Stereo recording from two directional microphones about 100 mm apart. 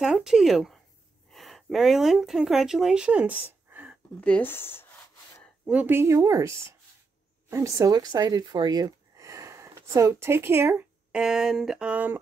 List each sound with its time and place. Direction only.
0.0 s speech: 5° right (ahead or behind)
3.7 s a sound: 20° right (ahead or behind)
4.2 s speech: 15° left (ahead or behind)
5.7 s speech: 20° right (ahead or behind)
11.1 s speech: 10° right (ahead or behind)